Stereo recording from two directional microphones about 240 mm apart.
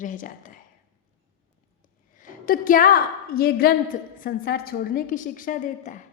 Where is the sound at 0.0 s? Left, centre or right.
Left.